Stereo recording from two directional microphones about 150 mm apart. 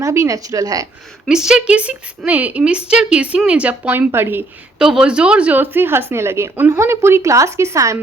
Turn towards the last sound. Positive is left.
turn(degrees=-20)  # may be behind; listen again after turning